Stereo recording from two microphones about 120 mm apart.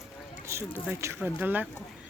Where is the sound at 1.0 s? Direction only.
15° right (ahead or behind).